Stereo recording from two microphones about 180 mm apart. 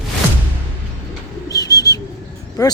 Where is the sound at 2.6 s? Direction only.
20° left (ahead or behind).